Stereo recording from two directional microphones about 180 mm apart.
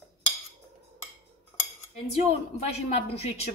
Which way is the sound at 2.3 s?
35° left (ahead or behind).